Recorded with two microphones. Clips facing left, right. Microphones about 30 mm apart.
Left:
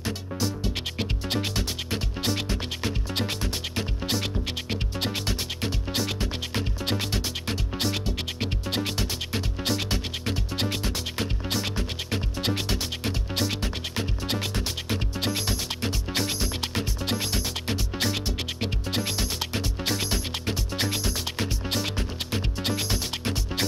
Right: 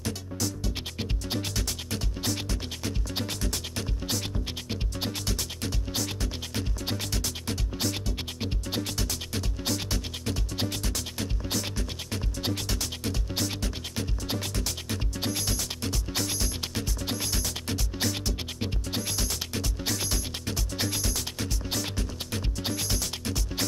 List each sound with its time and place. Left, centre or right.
0.0 s music: left